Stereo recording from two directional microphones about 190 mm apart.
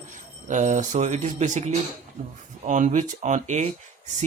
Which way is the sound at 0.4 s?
40° right (ahead or behind).